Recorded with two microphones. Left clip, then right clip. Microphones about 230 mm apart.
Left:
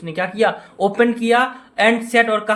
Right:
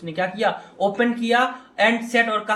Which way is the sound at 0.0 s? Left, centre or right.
Left.